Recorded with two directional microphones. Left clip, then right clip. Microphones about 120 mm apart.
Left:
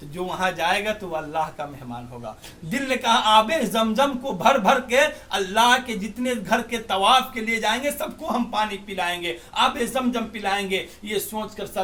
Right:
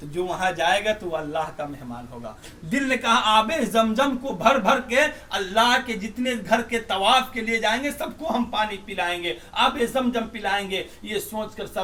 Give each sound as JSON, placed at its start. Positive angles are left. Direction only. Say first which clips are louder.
{"t": 0.3, "sound": "a man's voice", "louder": "even", "side_deg": 30}
{"t": 2.6, "sound": "a man's voice", "louder": "even", "side_deg": 55}